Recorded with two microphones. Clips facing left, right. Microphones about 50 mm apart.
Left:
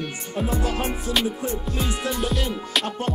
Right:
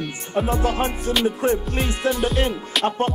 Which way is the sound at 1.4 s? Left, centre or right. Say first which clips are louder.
Right 8 dB; right.